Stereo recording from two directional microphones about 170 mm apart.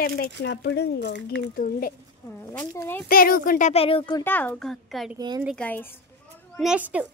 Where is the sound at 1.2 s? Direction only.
60° left (ahead or behind).